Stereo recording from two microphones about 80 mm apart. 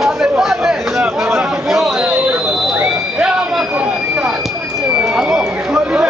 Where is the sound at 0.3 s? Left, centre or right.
Centre.